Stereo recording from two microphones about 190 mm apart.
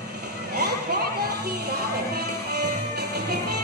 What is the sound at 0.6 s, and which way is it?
Music, 55° right (ahead or behind).